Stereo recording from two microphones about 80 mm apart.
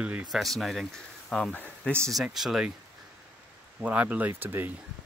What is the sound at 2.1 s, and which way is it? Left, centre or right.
Speech, centre.